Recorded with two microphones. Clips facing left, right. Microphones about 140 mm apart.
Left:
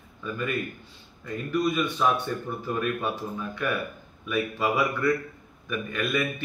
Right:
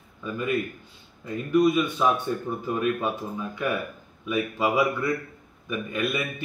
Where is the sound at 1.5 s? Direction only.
10° right (ahead or behind).